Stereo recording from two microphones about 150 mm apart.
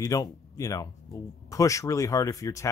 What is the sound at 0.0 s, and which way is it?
Speech, 20° left (ahead or behind).